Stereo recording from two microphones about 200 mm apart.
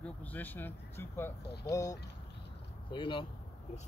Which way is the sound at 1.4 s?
55° left (ahead or behind).